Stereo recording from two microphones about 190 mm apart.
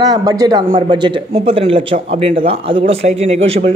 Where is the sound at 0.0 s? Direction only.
20° right (ahead or behind).